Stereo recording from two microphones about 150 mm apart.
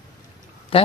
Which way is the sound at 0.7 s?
40° left (ahead or behind).